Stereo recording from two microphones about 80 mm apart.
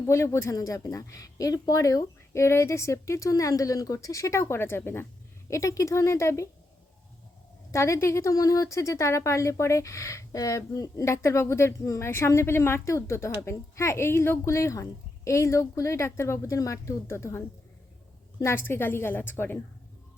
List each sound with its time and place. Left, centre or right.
0.0 s a woman's voice: left
0.5 s speech: left
5.5 s a woman's voice: left
7.7 s a woman's voice: left
18.4 s a woman's voice: left